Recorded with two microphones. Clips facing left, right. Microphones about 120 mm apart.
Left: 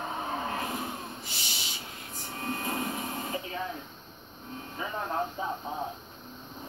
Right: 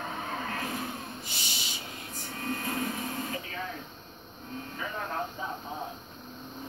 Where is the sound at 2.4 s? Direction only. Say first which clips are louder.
Even; 25° left (ahead or behind).